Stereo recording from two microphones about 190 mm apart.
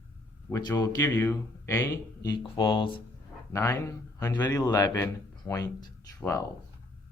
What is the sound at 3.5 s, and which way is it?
Speech, 15° left (ahead or behind).